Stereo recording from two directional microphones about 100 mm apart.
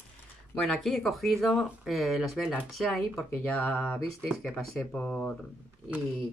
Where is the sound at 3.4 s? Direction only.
15° left (ahead or behind).